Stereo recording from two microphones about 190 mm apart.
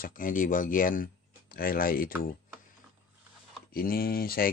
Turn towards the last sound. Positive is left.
turn(degrees=50)  # may be behind; listen again after turning